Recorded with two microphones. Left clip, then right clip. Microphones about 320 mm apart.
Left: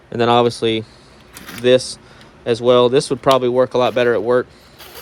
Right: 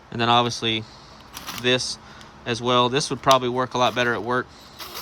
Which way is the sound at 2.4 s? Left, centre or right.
Centre.